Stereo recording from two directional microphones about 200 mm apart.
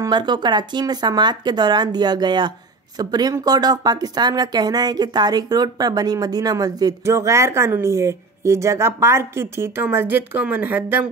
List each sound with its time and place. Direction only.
0.0 s speech: 20° right (ahead or behind)